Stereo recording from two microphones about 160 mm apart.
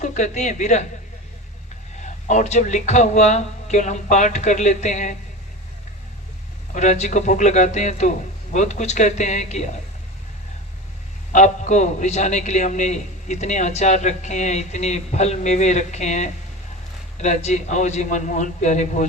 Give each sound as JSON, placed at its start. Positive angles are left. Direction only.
{"t": 0.0, "sound": "a man's voice", "side_deg": 45}
{"t": 2.0, "sound": "a man's voice", "side_deg": 50}
{"t": 6.7, "sound": "a man's voice", "side_deg": 45}
{"t": 11.3, "sound": "a man's voice", "side_deg": 50}